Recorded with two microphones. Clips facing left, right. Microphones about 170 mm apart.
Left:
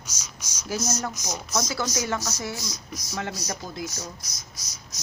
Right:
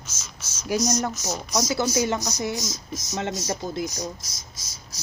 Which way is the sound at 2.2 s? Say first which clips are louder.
Right 4 dB; 15° right (ahead or behind).